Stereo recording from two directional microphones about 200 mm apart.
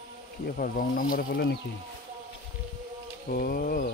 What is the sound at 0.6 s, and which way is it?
Speech, 45° left (ahead or behind).